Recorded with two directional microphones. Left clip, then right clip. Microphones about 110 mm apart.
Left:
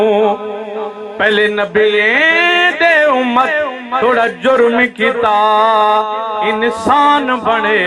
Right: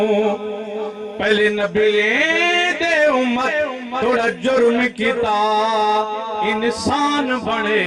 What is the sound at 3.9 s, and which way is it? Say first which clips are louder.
Music: left 6 dB; 15° right (ahead or behind).